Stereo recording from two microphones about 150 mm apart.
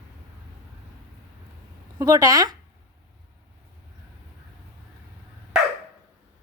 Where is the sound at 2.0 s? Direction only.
25° right (ahead or behind).